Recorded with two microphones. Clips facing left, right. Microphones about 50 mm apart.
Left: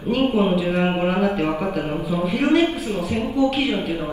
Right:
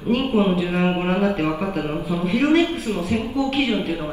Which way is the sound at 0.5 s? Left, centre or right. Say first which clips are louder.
Left 1 dB; right.